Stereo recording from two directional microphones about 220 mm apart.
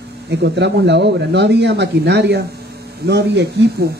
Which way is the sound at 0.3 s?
50° right (ahead or behind).